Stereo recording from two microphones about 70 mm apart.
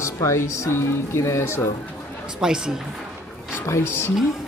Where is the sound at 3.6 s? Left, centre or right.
Left.